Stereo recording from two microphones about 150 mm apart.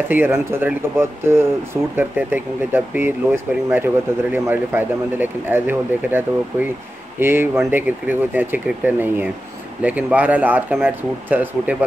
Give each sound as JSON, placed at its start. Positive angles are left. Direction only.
{"t": 0.1, "sound": "speech", "side_deg": -15}